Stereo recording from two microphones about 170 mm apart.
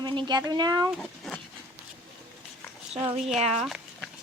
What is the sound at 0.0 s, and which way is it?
Speech, 25° right (ahead or behind).